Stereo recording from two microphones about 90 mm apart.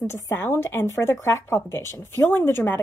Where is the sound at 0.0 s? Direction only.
30° left (ahead or behind).